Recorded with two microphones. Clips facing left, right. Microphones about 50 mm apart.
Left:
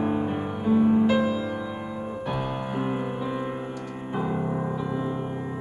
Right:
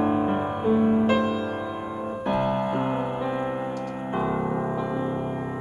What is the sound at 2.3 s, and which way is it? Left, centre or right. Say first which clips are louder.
Music: right 7 dB; centre.